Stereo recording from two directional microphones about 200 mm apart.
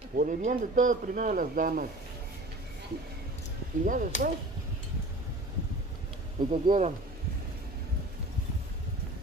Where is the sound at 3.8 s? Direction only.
40° right (ahead or behind).